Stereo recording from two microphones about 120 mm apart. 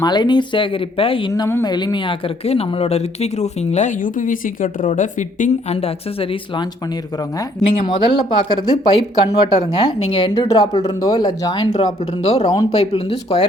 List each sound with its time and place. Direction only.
0.0 s speech: 35° left (ahead or behind)
1.3 s speech: 25° left (ahead or behind)
1.6 s speech: 35° left (ahead or behind); by 5.7 s 80° left
5.7 s speech: 55° left (ahead or behind)
7.9 s speech: 45° left (ahead or behind)
10.5 s speech: 30° left (ahead or behind)
12.2 s speech: 60° left (ahead or behind)